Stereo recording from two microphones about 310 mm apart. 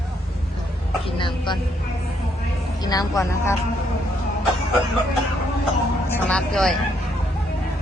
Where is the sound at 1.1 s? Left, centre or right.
Centre.